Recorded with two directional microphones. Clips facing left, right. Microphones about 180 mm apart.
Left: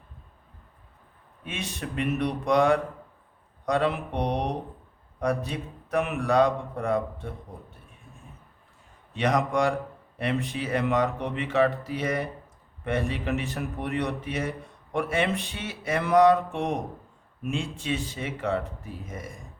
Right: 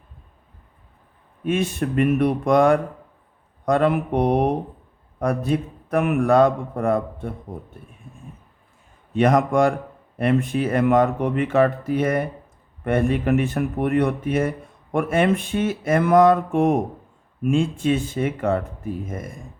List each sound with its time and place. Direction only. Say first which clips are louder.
1.5 s a man's voice: right 12 dB; 50° right (ahead or behind)
9.1 s a man's voice: right 7 dB; 50° right (ahead or behind)